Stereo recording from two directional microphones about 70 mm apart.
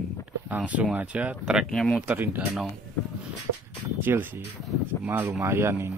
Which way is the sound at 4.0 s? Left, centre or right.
Right.